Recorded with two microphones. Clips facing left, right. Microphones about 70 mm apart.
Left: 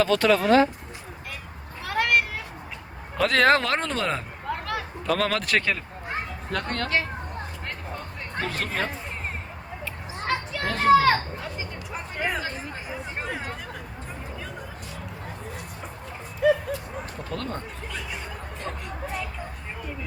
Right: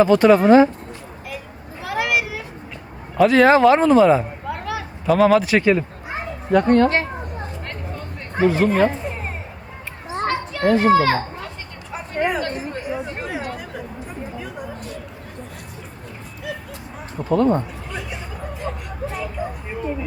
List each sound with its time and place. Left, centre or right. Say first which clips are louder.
0.0 s speech: right 8 dB; centre
1.8 s vehicle: right 2 dB; centre
3.2 s speech: right 7 dB; centre
4.4 s a sound: right 3 dB; centre
6.1 s children playing: right 7 dB; centre
8.4 s speech: right 13 dB; centre
10.2 s children playing: right 8 dB; centre
11.9 s a sound: right 8 dB; centre
12.7 s hubbub: right 7 dB; centre
16.4 s a sound: left 11 dB; left
17.2 s speech: right 17 dB; centre
18.7 s a sound: right 5 dB; centre